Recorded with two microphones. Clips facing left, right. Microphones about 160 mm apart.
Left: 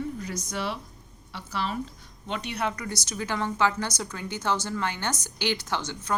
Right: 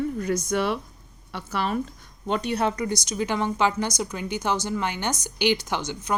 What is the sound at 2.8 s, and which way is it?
A woman's voice, 20° right (ahead or behind).